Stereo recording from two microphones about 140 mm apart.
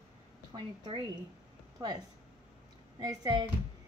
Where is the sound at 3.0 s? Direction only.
25° right (ahead or behind).